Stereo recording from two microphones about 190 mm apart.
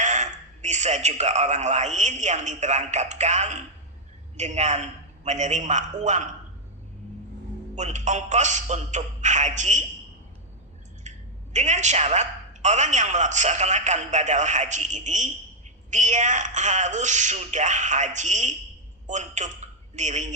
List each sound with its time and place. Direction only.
0.0 s a man's voice: 40° right (ahead or behind)
7.8 s a man's voice: 40° right (ahead or behind)
11.1 s clicking: 40° right (ahead or behind)
11.5 s a man's voice: 40° right (ahead or behind)